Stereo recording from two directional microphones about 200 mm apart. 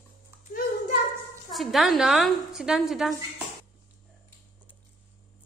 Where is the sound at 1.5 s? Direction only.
Centre (ahead or behind).